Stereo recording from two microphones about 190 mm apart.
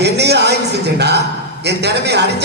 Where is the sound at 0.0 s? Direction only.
60° right (ahead or behind).